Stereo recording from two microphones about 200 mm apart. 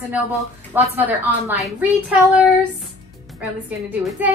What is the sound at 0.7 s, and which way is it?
Speech, 10° right (ahead or behind).